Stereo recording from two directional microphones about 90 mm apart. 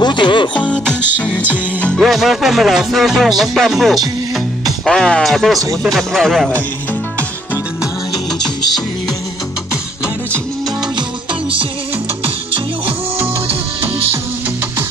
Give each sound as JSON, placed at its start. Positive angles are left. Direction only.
{"t": 0.0, "sound": "speech", "side_deg": 60}
{"t": 0.6, "sound": "music", "side_deg": 15}
{"t": 2.0, "sound": "music", "side_deg": -5}